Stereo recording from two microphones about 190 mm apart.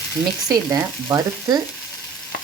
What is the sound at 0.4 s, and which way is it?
Frying, 20° right (ahead or behind).